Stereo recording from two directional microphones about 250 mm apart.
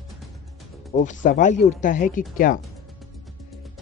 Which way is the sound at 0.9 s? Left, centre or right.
Left.